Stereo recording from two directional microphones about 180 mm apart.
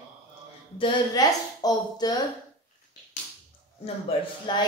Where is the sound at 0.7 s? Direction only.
25° left (ahead or behind).